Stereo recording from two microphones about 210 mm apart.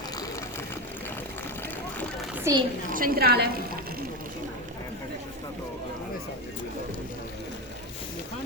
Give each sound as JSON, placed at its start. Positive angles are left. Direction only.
{"t": 2.4, "sound": "a woman's voice", "side_deg": -20}
{"t": 2.9, "sound": "a woman's voice", "side_deg": -45}